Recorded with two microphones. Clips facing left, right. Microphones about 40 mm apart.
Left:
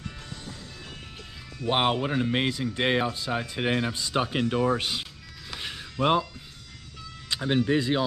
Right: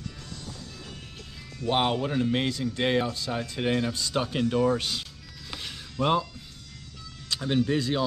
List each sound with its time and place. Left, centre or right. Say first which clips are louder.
1.6 s a man's voice: left 1 dB; centre
5.6 s music: left 2 dB; centre
7.2 s speech: left 1 dB; centre